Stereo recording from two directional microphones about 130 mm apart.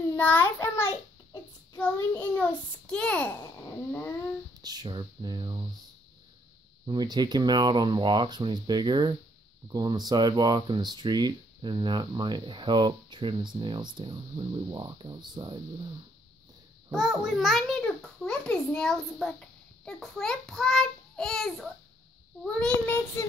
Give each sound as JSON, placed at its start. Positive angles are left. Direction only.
{"t": 0.1, "sound": "a child's voice", "side_deg": 15}
{"t": 1.8, "sound": "child singing", "side_deg": 15}
{"t": 4.6, "sound": "speech", "side_deg": -30}
{"t": 6.9, "sound": "speech", "side_deg": -30}
{"t": 16.9, "sound": "a child's voice", "side_deg": -5}
{"t": 18.2, "sound": "a sound", "side_deg": 10}
{"t": 19.1, "sound": "child singing", "side_deg": 5}